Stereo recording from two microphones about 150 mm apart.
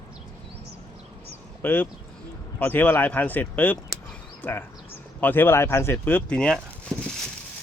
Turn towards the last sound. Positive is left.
turn(degrees=5)  # may be behind; listen again after turning